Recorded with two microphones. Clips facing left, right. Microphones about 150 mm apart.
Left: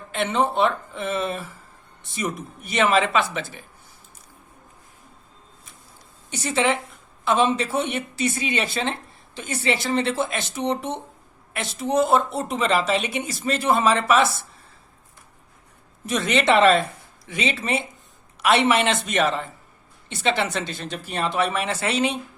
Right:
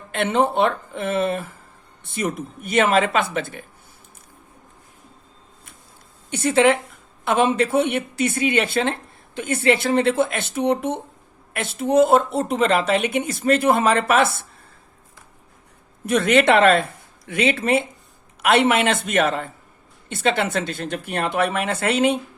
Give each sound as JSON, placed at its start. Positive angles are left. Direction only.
{"t": 0.1, "sound": "speech", "side_deg": -55}
{"t": 6.3, "sound": "speech", "side_deg": -55}
{"t": 16.0, "sound": "speech", "side_deg": -55}